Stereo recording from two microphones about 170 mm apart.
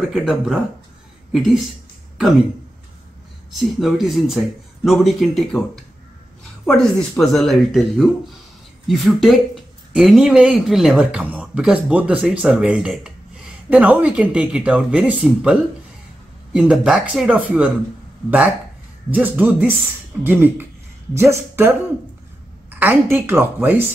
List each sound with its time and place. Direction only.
0.1 s speech: centre (ahead or behind)
2.1 s speech: centre (ahead or behind)
3.5 s speech: centre (ahead or behind)
6.6 s speech: centre (ahead or behind)
16.5 s speech: 5° right (ahead or behind)
19.0 s a woman's voice: 10° right (ahead or behind)